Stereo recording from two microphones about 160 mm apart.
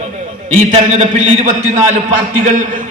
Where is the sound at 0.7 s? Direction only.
50° right (ahead or behind).